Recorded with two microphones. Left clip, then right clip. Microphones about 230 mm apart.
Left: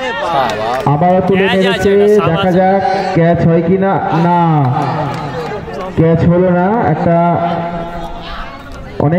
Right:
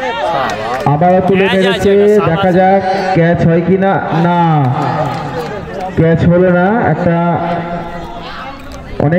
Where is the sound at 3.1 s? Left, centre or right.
Right.